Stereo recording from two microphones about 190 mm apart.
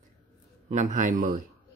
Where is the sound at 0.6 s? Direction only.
40° right (ahead or behind).